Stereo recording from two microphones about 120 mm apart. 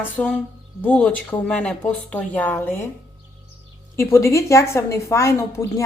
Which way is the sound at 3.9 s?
25° left (ahead or behind).